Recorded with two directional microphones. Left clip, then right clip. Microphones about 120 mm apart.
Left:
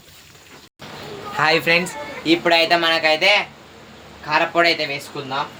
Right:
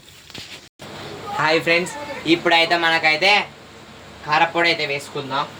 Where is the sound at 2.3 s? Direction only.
45° left (ahead or behind).